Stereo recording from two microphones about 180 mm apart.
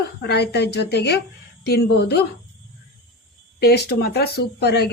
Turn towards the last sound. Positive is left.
turn(degrees=65)  # may be behind; listen again after turning